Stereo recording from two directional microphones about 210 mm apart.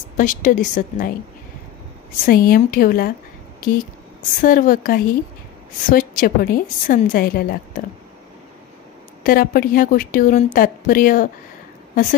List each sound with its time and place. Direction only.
0.2 s a woman's voice: 40° left (ahead or behind)
2.2 s a woman's voice: 45° left (ahead or behind)
4.4 s a woman's voice: 40° left (ahead or behind)
9.2 s a woman's voice: 40° left (ahead or behind)